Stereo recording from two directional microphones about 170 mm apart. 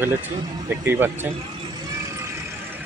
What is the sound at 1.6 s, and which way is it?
Vehicle, 20° right (ahead or behind).